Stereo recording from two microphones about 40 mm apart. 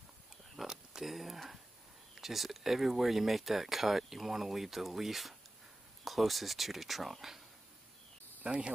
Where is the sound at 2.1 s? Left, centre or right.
Centre.